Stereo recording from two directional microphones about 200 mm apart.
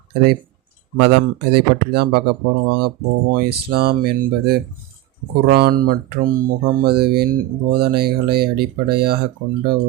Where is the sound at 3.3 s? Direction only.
50° right (ahead or behind).